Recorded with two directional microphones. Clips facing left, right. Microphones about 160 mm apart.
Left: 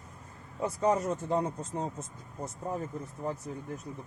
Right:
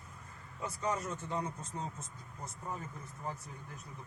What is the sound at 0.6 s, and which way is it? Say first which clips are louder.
Speech: left 9 dB; 40° left (ahead or behind).